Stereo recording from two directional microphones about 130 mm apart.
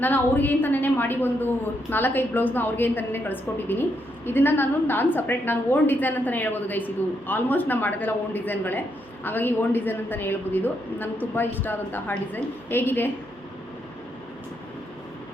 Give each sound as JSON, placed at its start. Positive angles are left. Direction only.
{"t": 0.0, "sound": "a woman's voice", "side_deg": 15}